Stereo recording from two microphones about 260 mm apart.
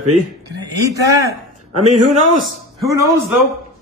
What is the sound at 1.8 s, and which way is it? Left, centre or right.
Speech, right.